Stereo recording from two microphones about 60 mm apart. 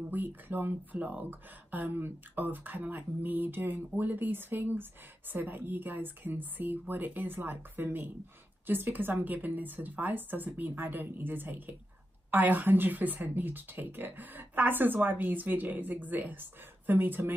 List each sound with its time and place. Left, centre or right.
0.1 s speech: right